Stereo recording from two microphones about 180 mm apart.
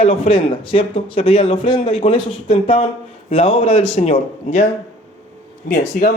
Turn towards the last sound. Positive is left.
turn(degrees=55)  # may be behind; listen again after turning